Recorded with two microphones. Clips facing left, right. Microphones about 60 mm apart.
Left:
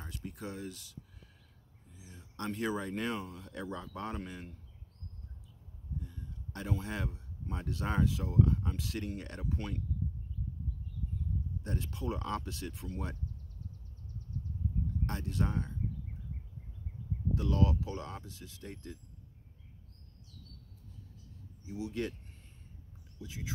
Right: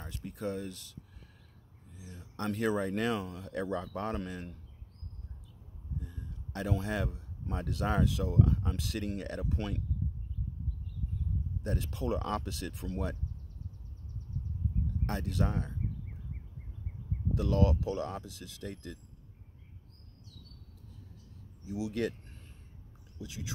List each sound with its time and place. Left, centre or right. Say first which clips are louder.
0.3 s speech: right 7 dB; right
2.0 s speech: right 3 dB; right
3.6 s speech: right 4 dB; right
5.9 s speech: right 1 dB; right
11.6 s speech: right 4 dB; right
15.0 s speech: right 4 dB; right
17.4 s speech: right 3 dB; right
21.6 s speech: right 4 dB; right
23.2 s speech: right 1 dB; right